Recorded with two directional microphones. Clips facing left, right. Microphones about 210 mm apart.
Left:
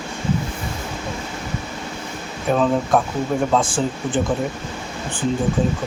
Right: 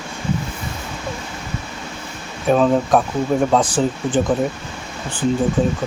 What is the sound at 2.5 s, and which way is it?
Speech, 15° right (ahead or behind).